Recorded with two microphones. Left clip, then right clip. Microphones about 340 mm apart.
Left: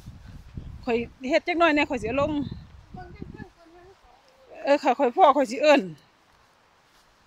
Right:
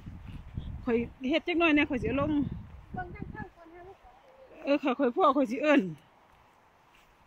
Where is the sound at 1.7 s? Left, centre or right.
Centre.